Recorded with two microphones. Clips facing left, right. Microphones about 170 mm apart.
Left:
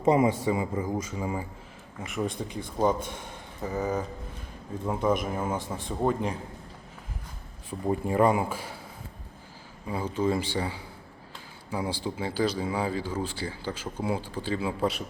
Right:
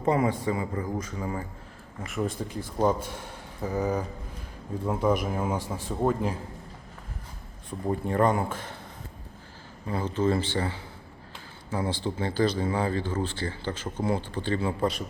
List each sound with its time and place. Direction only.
0.0 s speech: 20° left (ahead or behind)
2.0 s a man's voice: centre (ahead or behind)
7.7 s speech: 10° left (ahead or behind)
9.8 s speech: 10° left (ahead or behind)